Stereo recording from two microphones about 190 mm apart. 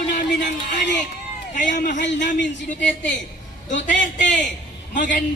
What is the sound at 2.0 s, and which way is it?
Speech, 65° left (ahead or behind).